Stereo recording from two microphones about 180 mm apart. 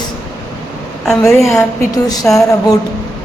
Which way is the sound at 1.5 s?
20° left (ahead or behind).